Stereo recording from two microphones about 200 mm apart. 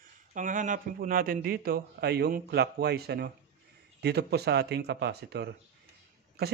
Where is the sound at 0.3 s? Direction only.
40° right (ahead or behind).